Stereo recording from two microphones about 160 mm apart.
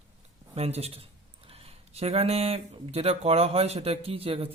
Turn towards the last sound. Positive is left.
turn(degrees=-35)  # may be behind; listen again after turning